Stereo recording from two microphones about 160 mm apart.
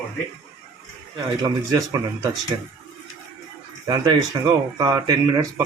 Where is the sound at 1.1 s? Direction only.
25° right (ahead or behind).